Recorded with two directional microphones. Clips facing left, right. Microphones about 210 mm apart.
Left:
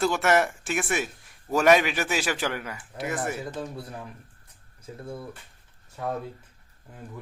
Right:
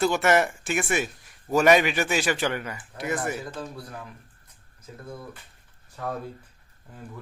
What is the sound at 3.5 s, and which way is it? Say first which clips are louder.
Speech: left 2 dB; 25° left (ahead or behind).